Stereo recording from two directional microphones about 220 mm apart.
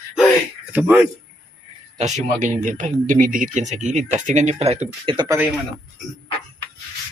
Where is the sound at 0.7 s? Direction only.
10° right (ahead or behind).